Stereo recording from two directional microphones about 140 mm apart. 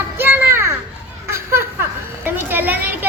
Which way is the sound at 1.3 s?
20° right (ahead or behind).